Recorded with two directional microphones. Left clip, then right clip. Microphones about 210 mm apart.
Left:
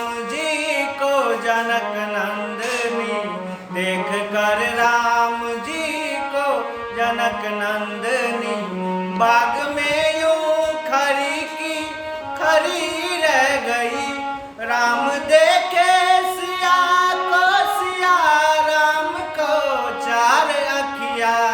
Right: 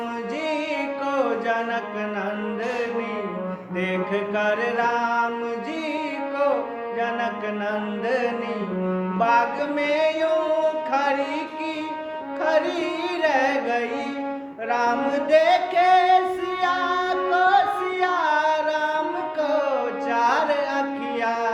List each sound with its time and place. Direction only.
0.4 s music: 20° left (ahead or behind)
3.8 s mantra: 20° left (ahead or behind)
8.0 s music: 20° left (ahead or behind)
12.4 s music: 20° left (ahead or behind)
13.2 s carnatic music: 20° left (ahead or behind)
14.7 s singing: 15° left (ahead or behind)
18.0 s music: 20° left (ahead or behind)
20.1 s music: 20° left (ahead or behind)